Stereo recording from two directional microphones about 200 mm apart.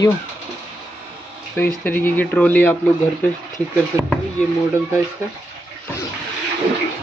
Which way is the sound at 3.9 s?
15° right (ahead or behind).